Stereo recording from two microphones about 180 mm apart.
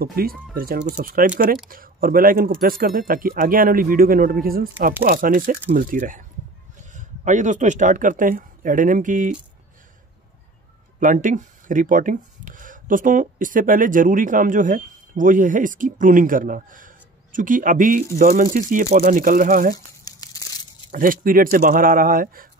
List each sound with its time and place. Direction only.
0.0 s speech: 55° right (ahead or behind)
11.0 s speech: 45° right (ahead or behind)
20.1 s crumpling: 20° left (ahead or behind)
20.9 s speech: 50° right (ahead or behind)